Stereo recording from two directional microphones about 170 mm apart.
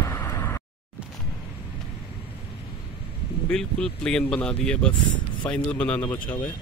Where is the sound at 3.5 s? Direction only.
5° left (ahead or behind).